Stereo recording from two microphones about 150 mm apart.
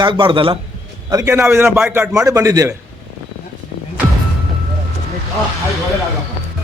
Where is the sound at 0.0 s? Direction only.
35° right (ahead or behind).